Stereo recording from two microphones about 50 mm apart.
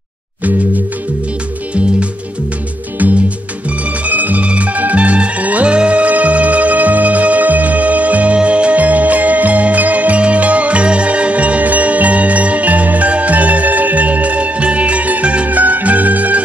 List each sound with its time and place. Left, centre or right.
4.0 s music: right